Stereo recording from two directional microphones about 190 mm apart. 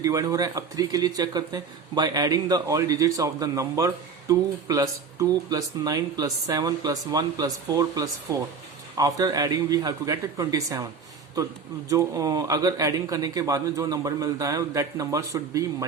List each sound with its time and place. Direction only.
0.0 s speech: 20° right (ahead or behind)
11.9 s a man's voice: 20° right (ahead or behind)